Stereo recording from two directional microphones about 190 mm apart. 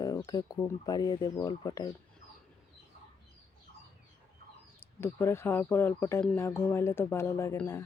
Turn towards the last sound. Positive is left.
turn(degrees=15)  # may be behind; listen again after turning